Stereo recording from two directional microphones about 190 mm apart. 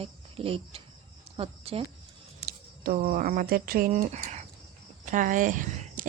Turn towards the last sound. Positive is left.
turn(degrees=-40)  # may be behind; listen again after turning